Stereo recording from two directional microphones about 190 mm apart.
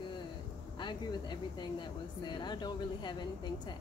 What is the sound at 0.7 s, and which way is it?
Speech, 25° left (ahead or behind).